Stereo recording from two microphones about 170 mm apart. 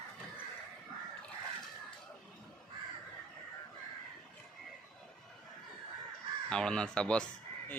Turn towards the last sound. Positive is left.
turn(degrees=5)  # may be behind; listen again after turning